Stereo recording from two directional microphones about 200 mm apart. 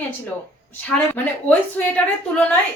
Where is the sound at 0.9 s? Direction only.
10° left (ahead or behind).